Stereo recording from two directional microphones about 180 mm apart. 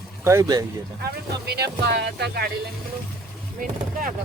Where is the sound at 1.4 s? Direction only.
65° right (ahead or behind).